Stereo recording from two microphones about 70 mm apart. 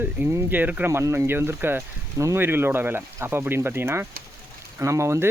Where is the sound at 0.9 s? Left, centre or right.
Right.